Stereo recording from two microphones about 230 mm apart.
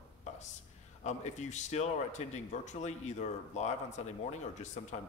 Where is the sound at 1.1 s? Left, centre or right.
Left.